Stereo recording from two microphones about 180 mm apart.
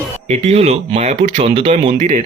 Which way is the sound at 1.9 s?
45° right (ahead or behind).